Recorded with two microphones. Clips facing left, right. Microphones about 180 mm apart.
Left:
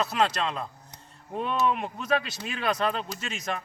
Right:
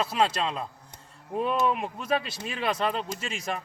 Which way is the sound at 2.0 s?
30° right (ahead or behind).